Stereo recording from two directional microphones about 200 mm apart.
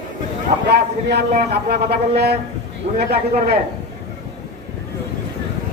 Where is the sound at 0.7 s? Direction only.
55° right (ahead or behind).